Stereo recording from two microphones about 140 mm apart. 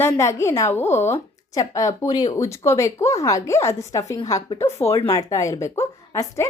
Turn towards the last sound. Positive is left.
turn(degrees=20)  # may be behind; listen again after turning